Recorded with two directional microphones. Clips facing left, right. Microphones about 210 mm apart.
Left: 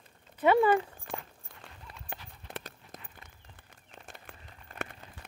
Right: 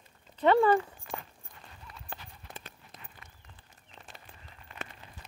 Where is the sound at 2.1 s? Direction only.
20° left (ahead or behind).